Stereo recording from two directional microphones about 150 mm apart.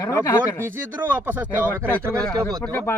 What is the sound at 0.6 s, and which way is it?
Speech, 15° right (ahead or behind).